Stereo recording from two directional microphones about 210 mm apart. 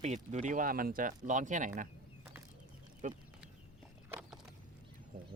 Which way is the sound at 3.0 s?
35° right (ahead or behind).